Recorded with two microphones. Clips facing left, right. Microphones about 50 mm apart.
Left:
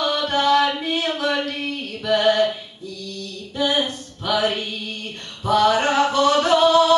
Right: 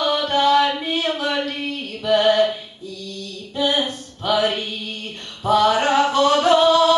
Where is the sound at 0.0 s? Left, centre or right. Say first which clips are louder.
Right 2 dB; centre.